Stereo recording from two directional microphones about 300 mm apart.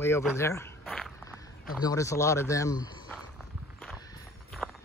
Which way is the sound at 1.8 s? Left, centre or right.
Centre.